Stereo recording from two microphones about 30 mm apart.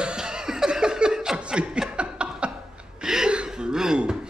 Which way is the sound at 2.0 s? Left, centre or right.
Right.